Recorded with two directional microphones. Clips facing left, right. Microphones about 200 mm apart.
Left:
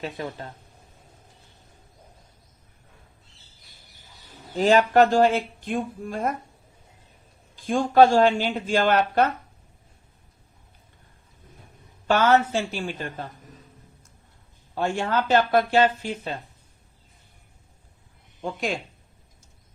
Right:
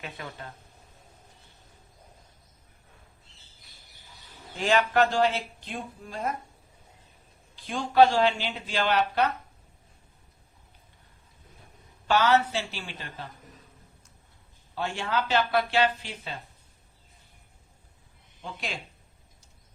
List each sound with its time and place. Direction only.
0.0 s speech: 35° left (ahead or behind)
4.5 s speech: 40° left (ahead or behind)
7.5 s speech: 45° left (ahead or behind)
12.0 s speech: 50° left (ahead or behind)
14.8 s speech: 45° left (ahead or behind)
18.4 s speech: 50° left (ahead or behind)